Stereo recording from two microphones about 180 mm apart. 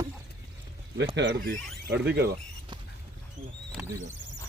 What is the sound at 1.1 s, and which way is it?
Speech, 70° right (ahead or behind).